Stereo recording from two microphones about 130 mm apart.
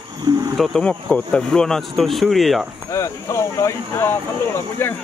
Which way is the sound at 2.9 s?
25° left (ahead or behind).